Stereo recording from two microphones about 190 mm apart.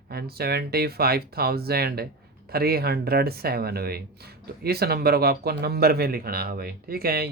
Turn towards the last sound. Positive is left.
turn(degrees=-55)  # may be behind; listen again after turning